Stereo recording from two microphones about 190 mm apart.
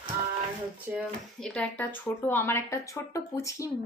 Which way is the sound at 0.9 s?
10° right (ahead or behind).